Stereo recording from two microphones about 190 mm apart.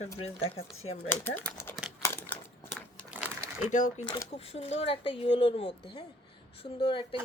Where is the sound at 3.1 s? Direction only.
10° right (ahead or behind).